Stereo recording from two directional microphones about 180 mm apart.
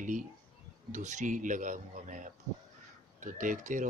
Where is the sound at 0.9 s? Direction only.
45° right (ahead or behind).